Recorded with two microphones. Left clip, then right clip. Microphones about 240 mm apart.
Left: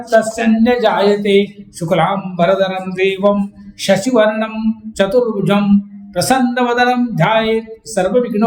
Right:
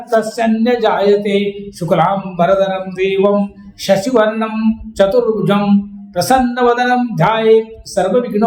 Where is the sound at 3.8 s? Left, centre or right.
Centre.